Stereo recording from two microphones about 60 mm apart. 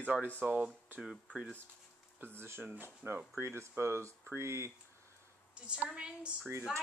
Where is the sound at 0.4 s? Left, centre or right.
Right.